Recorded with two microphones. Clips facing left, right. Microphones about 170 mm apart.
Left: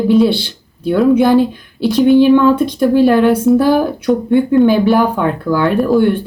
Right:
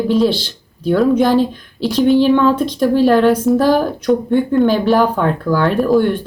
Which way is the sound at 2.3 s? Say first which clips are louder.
Left 3 dB; 10° left (ahead or behind).